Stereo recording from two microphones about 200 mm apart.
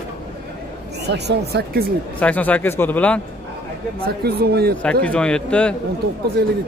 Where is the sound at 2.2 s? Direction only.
10° left (ahead or behind).